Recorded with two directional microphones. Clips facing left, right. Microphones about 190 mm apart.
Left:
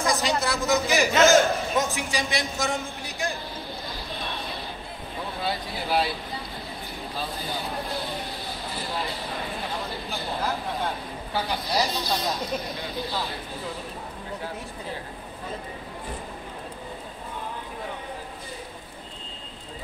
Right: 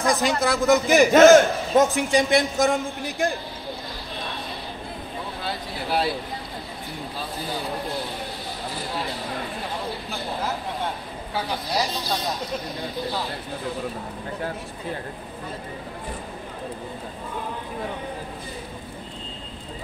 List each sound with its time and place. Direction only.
0.0 s a man's voice: 55° right (ahead or behind)
5.5 s speech: centre (ahead or behind)
11.3 s speech: centre (ahead or behind)